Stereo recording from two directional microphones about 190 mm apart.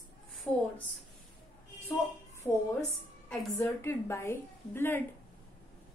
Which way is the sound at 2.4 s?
15° left (ahead or behind).